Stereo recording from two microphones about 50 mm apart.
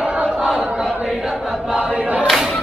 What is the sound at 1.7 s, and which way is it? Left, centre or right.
Choir, right.